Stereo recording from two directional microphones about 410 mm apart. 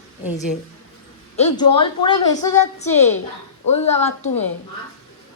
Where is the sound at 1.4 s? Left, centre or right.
Centre.